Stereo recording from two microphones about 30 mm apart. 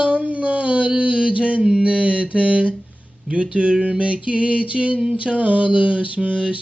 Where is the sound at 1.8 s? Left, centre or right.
Right.